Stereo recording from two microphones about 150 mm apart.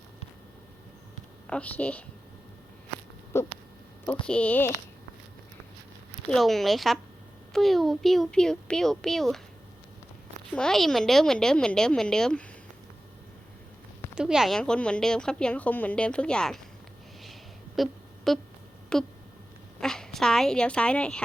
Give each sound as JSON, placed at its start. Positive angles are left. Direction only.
{"t": 1.5, "sound": "speech", "side_deg": 10}
{"t": 3.3, "sound": "a sound", "side_deg": 15}
{"t": 4.3, "sound": "speech", "side_deg": 10}
{"t": 6.2, "sound": "a woman's voice", "side_deg": 5}
{"t": 10.5, "sound": "a woman's voice", "side_deg": 5}
{"t": 14.2, "sound": "a woman's voice", "side_deg": -5}
{"t": 17.8, "sound": "a woman's voice", "side_deg": 0}